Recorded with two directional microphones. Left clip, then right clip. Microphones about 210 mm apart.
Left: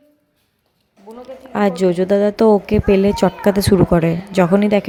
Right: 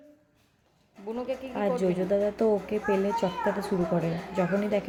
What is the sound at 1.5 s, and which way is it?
A woman's voice, 45° left (ahead or behind).